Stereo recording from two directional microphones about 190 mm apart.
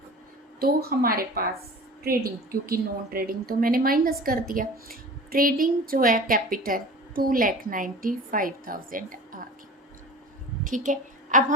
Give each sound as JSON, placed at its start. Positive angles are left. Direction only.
{"t": 0.6, "sound": "a woman's voice", "side_deg": -50}
{"t": 2.5, "sound": "a woman's voice", "side_deg": -50}
{"t": 10.6, "sound": "a woman's voice", "side_deg": -45}